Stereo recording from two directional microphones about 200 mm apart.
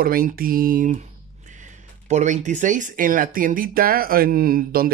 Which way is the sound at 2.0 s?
35° right (ahead or behind).